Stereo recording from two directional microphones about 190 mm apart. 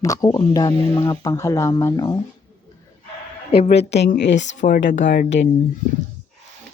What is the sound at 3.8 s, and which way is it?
Speech, 65° left (ahead or behind).